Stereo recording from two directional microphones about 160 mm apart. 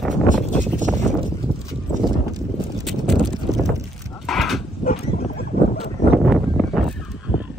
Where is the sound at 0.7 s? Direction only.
50° right (ahead or behind).